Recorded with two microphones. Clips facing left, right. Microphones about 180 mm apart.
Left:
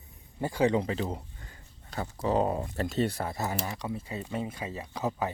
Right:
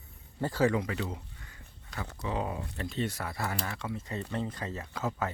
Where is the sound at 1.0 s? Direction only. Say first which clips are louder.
Left 4 dB; 35° left (ahead or behind).